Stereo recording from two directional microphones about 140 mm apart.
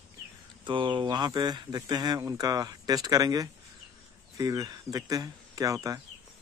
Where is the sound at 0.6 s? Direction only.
35° right (ahead or behind).